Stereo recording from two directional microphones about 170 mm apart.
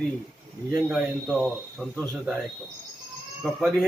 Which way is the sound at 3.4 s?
5° right (ahead or behind).